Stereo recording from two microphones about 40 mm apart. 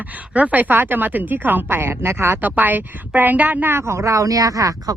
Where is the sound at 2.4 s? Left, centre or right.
Right.